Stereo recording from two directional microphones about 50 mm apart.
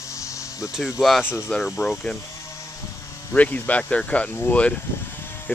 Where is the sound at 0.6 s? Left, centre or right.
Centre.